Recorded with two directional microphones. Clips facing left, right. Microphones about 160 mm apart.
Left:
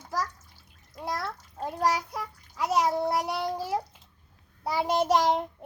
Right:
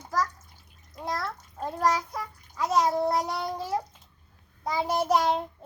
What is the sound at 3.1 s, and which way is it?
Child singing, 10° left (ahead or behind).